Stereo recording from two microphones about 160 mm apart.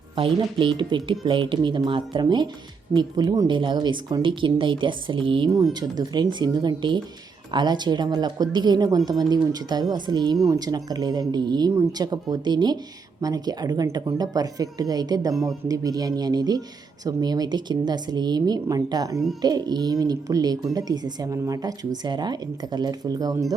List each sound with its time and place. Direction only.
0.2 s speech: 30° right (ahead or behind)
5.5 s speech: 25° right (ahead or behind)